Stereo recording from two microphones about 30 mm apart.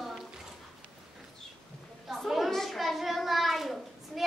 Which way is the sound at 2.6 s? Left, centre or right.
Centre.